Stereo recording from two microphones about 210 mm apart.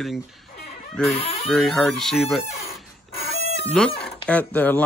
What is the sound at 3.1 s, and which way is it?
Chicken, 30° left (ahead or behind).